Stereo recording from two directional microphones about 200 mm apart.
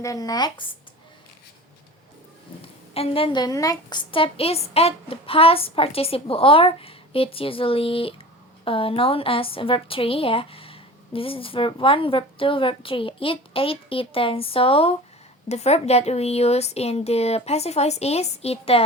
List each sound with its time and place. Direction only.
0.0 s a woman's voice: 15° left (ahead or behind)
2.9 s a woman's voice: 30° left (ahead or behind)